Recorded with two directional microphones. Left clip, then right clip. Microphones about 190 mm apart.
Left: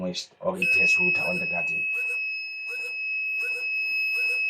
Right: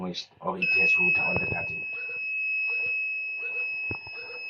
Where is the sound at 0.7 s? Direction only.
65° left (ahead or behind).